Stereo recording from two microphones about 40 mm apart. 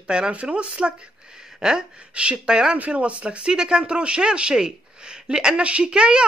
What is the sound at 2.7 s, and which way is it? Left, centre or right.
A woman's voice, right.